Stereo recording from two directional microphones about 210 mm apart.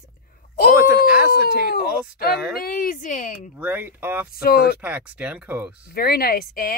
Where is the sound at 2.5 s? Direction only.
45° left (ahead or behind).